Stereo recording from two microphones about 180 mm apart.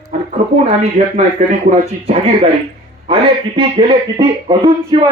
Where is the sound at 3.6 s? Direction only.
30° right (ahead or behind).